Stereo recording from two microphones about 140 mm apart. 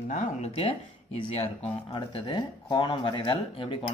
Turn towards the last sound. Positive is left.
turn(degrees=35)  # may be behind; listen again after turning